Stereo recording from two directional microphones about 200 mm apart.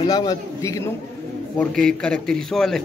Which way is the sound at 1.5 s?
5° left (ahead or behind).